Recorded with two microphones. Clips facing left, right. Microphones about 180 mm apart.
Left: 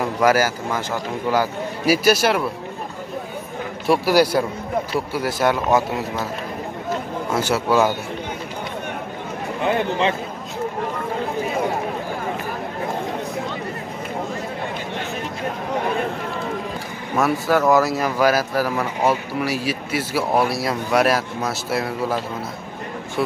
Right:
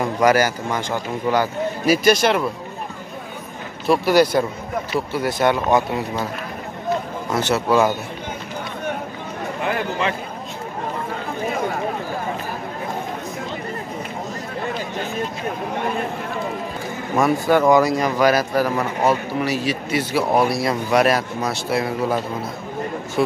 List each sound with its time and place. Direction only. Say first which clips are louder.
0.0 s speech: right 1 dB; 5° left (ahead or behind)
3.8 s speech: right 1 dB; 10° left (ahead or behind)
7.2 s speech: right 1 dB; 10° left (ahead or behind)
9.7 s a man's voice: left 3 dB; 25° left (ahead or behind)
17.2 s speech: right 2 dB; centre (ahead or behind)